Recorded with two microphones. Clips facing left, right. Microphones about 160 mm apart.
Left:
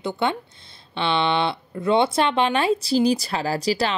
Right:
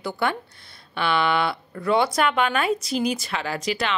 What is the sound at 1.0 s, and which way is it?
Speech, 25° left (ahead or behind).